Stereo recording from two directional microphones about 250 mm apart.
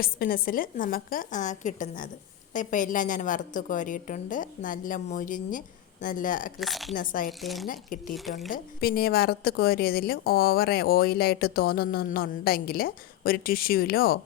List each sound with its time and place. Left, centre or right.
0.0 s a woman's voice: left
6.6 s speech: centre
6.9 s a woman's voice: left
7.3 s speech: centre
7.7 s a woman's voice: left
8.1 s speech: centre
8.4 s a woman's voice: left